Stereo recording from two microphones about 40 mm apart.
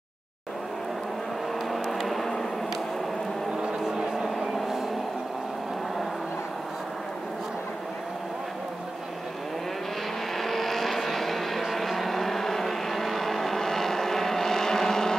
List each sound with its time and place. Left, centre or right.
1.7 s vehicle: centre
3.6 s vehicle: centre
10.3 s vehicle: centre